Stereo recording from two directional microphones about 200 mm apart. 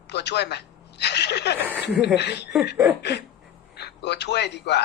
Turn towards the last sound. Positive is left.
turn(degrees=60)  # may be behind; listen again after turning